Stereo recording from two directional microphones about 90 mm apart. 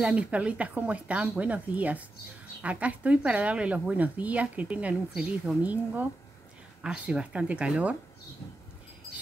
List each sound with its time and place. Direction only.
0.0 s a woman's voice: 15° right (ahead or behind)